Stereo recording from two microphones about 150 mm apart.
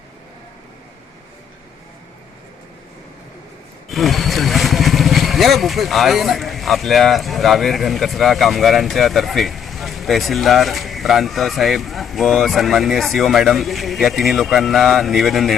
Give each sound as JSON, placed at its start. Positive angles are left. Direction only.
{"t": 3.8, "sound": "speech", "side_deg": 0}